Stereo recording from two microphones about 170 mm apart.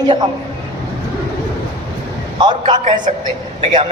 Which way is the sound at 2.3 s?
25° right (ahead or behind).